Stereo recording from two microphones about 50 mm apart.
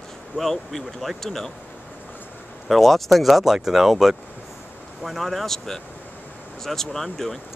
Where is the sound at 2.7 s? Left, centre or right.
Centre.